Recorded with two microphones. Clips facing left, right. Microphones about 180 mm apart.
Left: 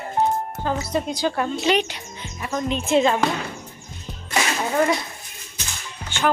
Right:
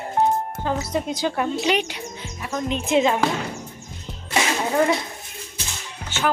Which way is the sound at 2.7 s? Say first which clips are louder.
Even; 15° right (ahead or behind).